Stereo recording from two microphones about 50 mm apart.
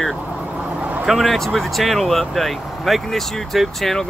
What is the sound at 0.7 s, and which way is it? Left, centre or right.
Vehicle, right.